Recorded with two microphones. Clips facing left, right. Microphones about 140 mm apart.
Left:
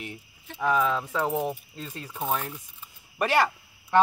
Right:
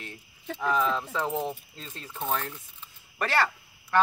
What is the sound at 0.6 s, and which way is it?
Speech, 5° left (ahead or behind).